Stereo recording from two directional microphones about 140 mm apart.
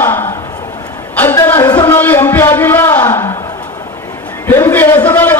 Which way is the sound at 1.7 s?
20° left (ahead or behind).